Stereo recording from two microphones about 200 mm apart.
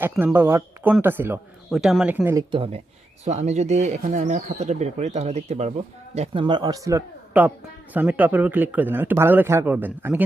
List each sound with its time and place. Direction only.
0.0 s a man's voice: 10° right (ahead or behind)
2.5 s a man's voice: 30° right (ahead or behind); by 10.2 s 10° right (ahead or behind)